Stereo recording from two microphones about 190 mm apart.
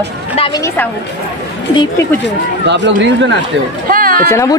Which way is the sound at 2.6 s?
70° right (ahead or behind).